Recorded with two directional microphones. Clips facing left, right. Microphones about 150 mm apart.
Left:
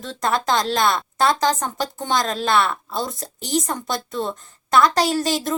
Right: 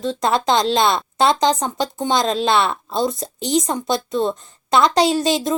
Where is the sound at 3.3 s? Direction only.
5° left (ahead or behind).